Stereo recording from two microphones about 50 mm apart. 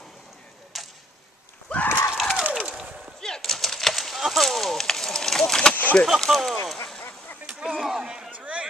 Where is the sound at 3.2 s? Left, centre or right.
Centre.